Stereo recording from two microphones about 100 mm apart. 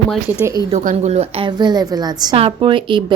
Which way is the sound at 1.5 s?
45° right (ahead or behind).